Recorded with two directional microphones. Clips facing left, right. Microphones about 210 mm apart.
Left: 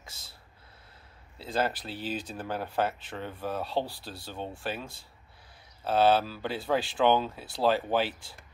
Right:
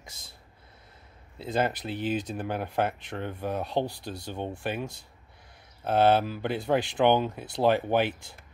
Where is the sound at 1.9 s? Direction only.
55° right (ahead or behind).